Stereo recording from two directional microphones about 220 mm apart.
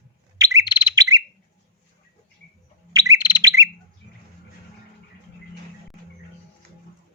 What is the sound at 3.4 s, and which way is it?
Bird, 15° right (ahead or behind).